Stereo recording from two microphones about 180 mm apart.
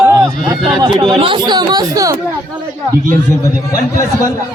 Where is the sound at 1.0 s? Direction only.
30° right (ahead or behind).